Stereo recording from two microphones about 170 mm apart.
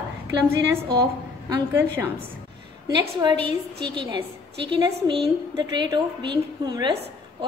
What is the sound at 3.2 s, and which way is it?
A woman's voice, 25° right (ahead or behind).